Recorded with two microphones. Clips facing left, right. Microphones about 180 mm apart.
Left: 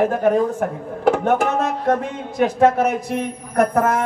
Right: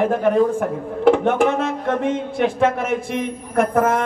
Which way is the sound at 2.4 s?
40° left (ahead or behind).